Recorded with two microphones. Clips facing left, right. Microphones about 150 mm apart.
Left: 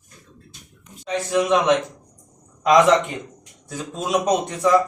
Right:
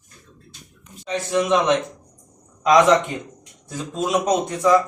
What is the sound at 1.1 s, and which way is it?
Speech, centre (ahead or behind).